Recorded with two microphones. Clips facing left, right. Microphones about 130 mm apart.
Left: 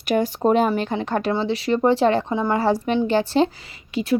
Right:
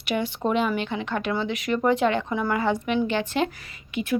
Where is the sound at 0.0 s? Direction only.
40° left (ahead or behind).